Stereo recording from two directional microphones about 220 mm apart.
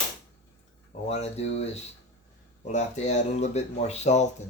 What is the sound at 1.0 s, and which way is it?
Speech, 30° left (ahead or behind).